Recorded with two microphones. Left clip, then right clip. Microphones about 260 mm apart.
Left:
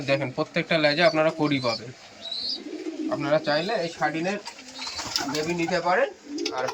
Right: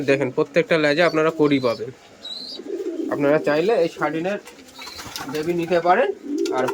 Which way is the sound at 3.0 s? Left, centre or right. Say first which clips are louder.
Right 5 dB; centre.